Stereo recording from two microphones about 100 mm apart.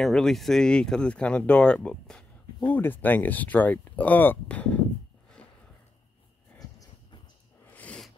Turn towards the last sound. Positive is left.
turn(degrees=15)  # may be behind; listen again after turning